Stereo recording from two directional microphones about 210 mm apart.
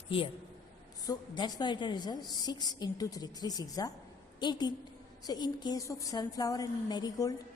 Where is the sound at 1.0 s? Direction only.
20° left (ahead or behind).